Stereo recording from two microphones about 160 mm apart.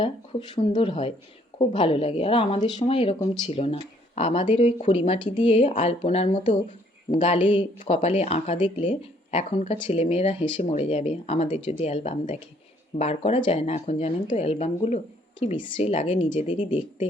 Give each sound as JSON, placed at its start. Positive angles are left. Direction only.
{"t": 0.0, "sound": "speech", "side_deg": 30}
{"t": 6.7, "sound": "speech", "side_deg": 40}